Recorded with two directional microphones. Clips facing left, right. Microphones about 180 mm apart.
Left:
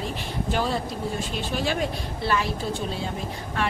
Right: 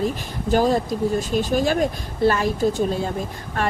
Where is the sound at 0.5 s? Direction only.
40° right (ahead or behind).